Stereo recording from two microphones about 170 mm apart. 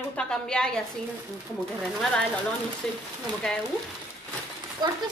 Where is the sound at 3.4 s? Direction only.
5° left (ahead or behind).